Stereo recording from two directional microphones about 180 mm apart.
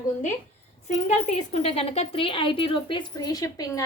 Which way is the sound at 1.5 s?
35° left (ahead or behind).